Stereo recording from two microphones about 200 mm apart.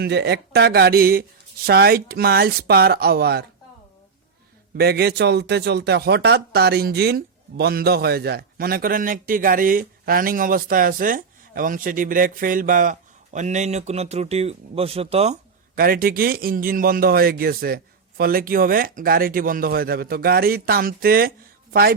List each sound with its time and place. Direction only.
0.0 s speech: 55° right (ahead or behind)
4.8 s speech: 50° right (ahead or behind); by 15.4 s 30° right (ahead or behind)
15.7 s speech: 45° right (ahead or behind)